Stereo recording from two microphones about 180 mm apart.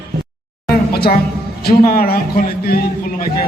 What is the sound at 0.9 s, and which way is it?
A woman's voice, 60° left (ahead or behind).